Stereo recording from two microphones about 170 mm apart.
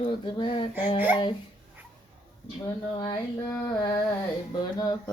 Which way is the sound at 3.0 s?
25° left (ahead or behind).